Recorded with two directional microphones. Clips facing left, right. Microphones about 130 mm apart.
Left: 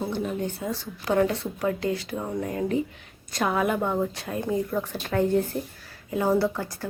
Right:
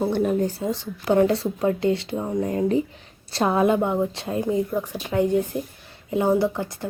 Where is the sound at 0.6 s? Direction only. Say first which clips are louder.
Right 4 dB; 25° right (ahead or behind).